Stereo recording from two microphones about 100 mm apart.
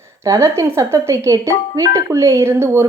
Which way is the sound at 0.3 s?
30° right (ahead or behind).